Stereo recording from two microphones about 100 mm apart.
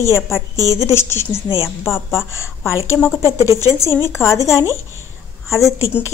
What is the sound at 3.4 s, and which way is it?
Speech, 30° left (ahead or behind).